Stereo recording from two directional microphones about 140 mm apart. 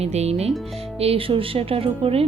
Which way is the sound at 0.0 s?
50° right (ahead or behind).